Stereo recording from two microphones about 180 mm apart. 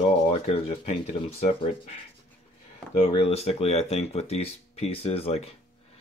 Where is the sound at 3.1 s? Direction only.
35° left (ahead or behind).